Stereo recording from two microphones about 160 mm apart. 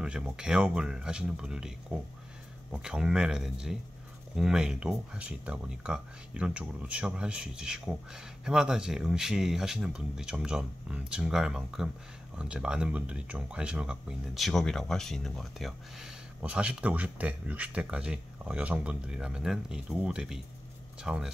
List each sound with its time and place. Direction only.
0.0 s speech: 5° right (ahead or behind)